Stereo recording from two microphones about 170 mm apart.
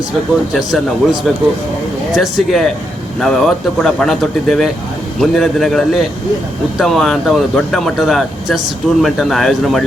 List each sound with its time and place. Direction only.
0.5 s speech: centre (ahead or behind)